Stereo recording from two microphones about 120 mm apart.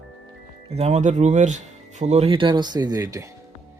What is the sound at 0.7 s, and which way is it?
Speech, 65° right (ahead or behind).